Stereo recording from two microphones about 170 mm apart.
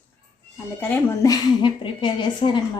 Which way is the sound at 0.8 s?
10° left (ahead or behind).